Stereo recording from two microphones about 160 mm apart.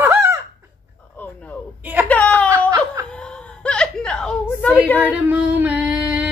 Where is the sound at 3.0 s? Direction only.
10° left (ahead or behind).